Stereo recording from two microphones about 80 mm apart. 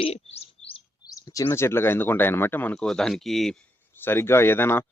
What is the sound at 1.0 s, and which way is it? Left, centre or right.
Bird, left.